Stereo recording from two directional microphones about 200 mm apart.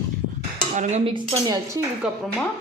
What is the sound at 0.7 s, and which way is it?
Speech, 35° right (ahead or behind).